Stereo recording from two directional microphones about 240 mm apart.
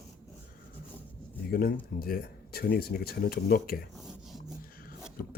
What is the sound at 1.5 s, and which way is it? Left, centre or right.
Speech, left.